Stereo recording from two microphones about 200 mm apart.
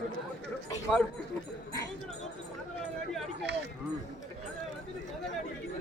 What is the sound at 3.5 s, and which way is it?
Speech, 55° right (ahead or behind).